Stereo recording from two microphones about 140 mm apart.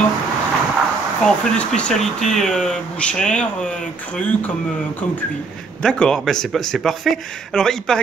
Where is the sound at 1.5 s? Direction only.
10° left (ahead or behind).